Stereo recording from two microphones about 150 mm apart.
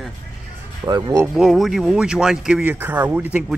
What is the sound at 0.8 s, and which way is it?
Speech, 20° right (ahead or behind).